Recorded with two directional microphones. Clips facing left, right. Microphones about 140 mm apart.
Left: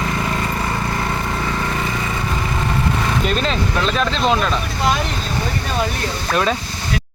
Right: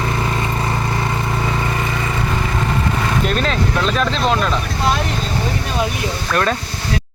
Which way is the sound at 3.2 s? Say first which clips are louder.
Right 1 dB; centre (ahead or behind).